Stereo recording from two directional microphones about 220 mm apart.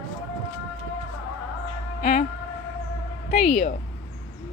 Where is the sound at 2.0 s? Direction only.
30° left (ahead or behind).